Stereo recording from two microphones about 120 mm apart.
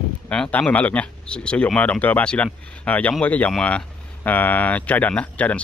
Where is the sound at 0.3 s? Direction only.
10° left (ahead or behind).